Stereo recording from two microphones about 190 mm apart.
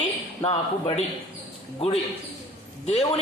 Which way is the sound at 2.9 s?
35° left (ahead or behind).